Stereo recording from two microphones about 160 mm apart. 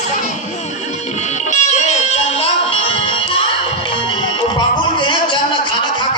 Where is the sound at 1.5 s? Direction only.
45° left (ahead or behind).